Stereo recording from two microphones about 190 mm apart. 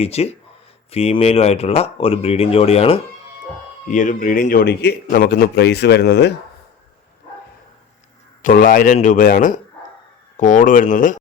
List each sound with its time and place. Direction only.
0.0 s speech: 35° left (ahead or behind)
3.8 s a man's voice: 40° left (ahead or behind); by 6.3 s 60° left (ahead or behind)
8.4 s speech: 45° left (ahead or behind)